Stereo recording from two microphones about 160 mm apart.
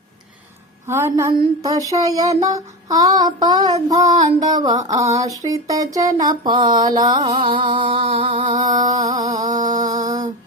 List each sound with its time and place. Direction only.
0.9 s a woman's voice: 15° right (ahead or behind)
1.3 s a sound: 20° right (ahead or behind)
8.4 s mantra: 50° right (ahead or behind)